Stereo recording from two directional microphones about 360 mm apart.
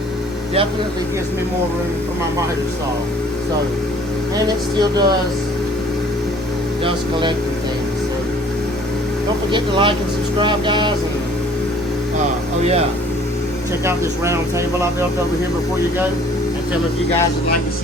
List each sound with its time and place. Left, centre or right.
4.4 s speech: centre
6.8 s speech: centre
9.5 s speech: centre